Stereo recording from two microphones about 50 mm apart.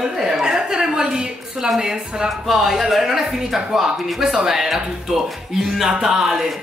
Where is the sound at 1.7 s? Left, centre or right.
Centre.